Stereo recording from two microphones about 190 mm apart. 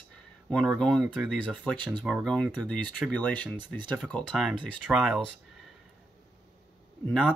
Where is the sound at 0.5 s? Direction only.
Centre (ahead or behind).